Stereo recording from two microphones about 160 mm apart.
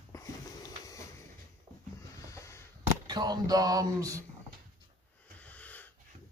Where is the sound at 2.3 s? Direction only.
20° left (ahead or behind).